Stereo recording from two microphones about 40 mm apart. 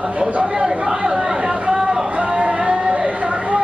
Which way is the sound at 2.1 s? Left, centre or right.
Right.